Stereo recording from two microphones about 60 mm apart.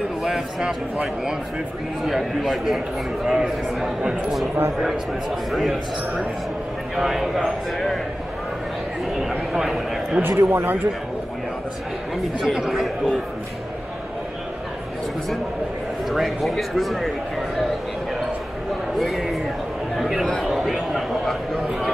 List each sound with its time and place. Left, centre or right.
0.2 s speech: centre
2.0 s a man's voice: centre
9.5 s speech: centre
10.2 s speech: right
12.4 s a man's voice: centre
16.1 s speech: centre
18.9 s a sound: centre